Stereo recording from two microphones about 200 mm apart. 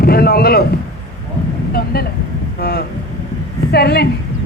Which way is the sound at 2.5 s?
50° left (ahead or behind).